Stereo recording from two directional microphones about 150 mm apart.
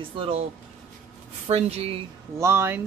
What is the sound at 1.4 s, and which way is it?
Speech, 40° right (ahead or behind).